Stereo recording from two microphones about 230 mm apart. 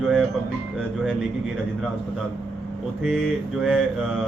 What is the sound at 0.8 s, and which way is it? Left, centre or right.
Speech, centre.